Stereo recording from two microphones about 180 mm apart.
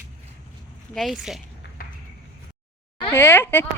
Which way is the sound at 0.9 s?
Centre (ahead or behind).